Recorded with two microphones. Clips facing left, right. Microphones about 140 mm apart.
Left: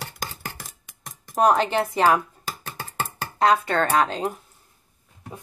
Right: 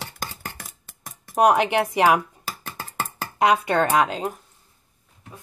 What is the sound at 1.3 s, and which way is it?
Speech, 15° right (ahead or behind).